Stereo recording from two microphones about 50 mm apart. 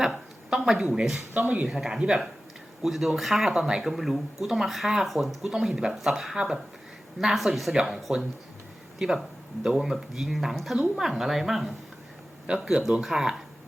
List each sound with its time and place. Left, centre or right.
0.0 s a woman's voice: centre
1.3 s speech: right
1.6 s speech: centre
2.8 s speech: centre
3.5 s speech: centre
7.3 s speech: centre